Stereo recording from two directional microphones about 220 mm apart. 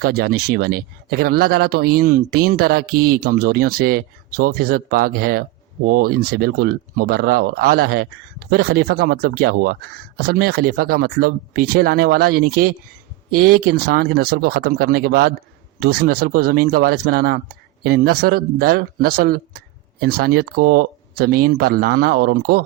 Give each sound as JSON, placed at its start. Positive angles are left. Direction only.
{"t": 0.0, "sound": "speech", "side_deg": -45}